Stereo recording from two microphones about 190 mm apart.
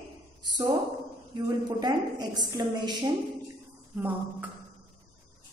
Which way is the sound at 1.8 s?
20° right (ahead or behind).